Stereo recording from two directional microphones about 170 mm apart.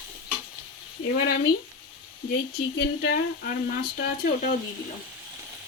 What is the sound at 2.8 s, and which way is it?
Speech, 65° left (ahead or behind).